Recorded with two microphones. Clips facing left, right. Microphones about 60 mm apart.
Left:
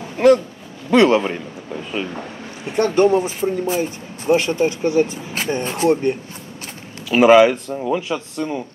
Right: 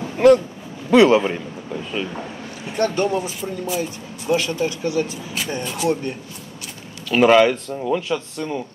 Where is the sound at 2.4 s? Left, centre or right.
Left.